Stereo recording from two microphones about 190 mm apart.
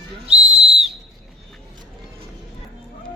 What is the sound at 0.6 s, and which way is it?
Whistle, 35° right (ahead or behind).